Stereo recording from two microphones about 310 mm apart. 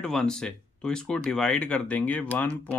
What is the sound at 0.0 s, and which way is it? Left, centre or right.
Speech, centre.